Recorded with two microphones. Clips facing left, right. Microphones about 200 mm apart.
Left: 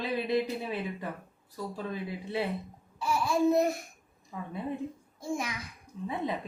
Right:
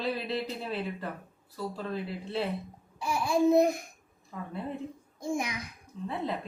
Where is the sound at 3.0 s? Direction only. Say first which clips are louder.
Right 1 dB; 15° right (ahead or behind).